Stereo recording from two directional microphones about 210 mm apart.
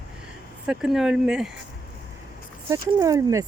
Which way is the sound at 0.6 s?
5° right (ahead or behind).